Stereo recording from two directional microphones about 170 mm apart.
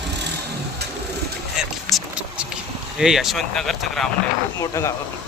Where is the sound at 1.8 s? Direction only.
Centre (ahead or behind).